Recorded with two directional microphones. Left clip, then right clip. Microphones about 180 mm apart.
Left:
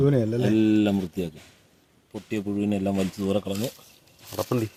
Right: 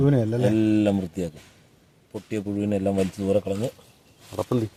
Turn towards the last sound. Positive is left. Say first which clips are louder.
# right 1 dB
turn(degrees=0)  # may be behind; listen again after turning